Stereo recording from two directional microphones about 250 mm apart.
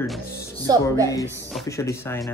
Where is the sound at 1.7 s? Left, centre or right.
Centre.